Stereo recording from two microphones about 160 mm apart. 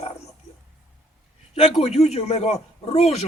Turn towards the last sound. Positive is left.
turn(degrees=40)  # may be behind; listen again after turning